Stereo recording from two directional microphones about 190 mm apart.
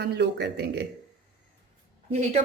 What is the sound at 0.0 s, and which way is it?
Speech, 60° right (ahead or behind).